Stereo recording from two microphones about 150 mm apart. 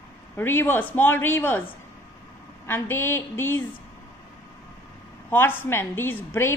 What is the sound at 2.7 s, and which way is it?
Speech, 15° left (ahead or behind).